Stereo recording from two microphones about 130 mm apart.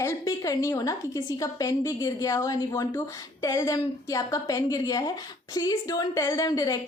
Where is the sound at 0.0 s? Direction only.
25° left (ahead or behind).